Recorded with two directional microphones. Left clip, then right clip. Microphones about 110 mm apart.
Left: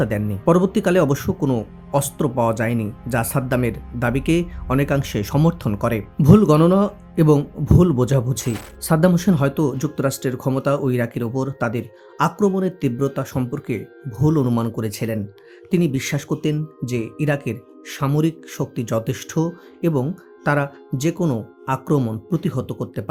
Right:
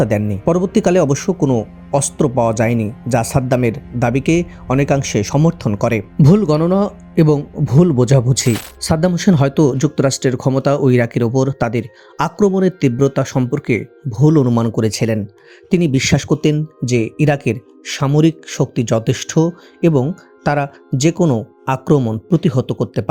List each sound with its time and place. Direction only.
0.0 s speech: 35° right (ahead or behind)
6.2 s speech: 35° right (ahead or behind)
8.3 s speech: 40° right (ahead or behind)